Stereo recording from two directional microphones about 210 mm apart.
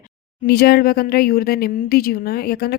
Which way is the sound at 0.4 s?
50° left (ahead or behind).